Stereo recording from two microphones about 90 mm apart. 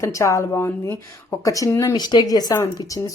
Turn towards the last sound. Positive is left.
turn(degrees=45)  # may be behind; listen again after turning